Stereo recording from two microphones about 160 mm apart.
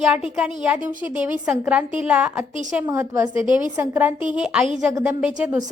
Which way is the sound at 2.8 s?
15° right (ahead or behind).